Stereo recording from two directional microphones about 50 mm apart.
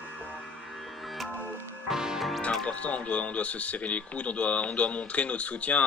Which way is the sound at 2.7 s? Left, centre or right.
Left.